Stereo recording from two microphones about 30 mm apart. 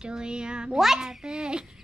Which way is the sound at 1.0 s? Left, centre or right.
Right.